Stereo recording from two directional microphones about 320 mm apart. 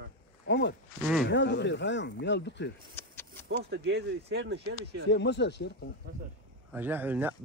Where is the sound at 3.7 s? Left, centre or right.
Right.